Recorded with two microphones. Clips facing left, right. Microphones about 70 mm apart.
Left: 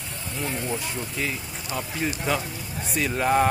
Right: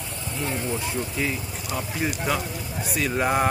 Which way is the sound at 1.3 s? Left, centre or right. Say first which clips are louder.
Right 1 dB; centre.